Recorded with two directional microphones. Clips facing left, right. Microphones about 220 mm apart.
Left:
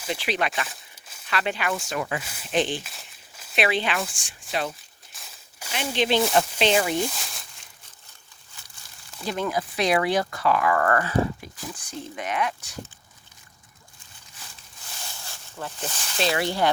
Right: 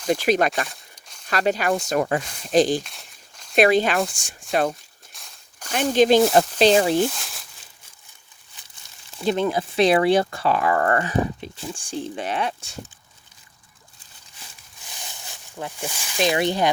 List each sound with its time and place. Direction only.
0.1 s speech: 45° right (ahead or behind)
0.7 s a sound: 5° left (ahead or behind)
1.3 s speech: 40° right (ahead or behind)
2.8 s a sound: centre (ahead or behind)
3.5 s speech: 45° right (ahead or behind)
5.1 s walk: 5° left (ahead or behind)
5.7 s speech: 45° right (ahead or behind)
6.9 s speech: centre (ahead or behind)
9.2 s speech: 25° right (ahead or behind)
14.8 s snake: 15° right (ahead or behind)